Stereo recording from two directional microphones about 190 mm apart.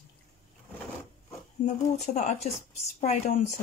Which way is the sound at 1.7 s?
35° left (ahead or behind).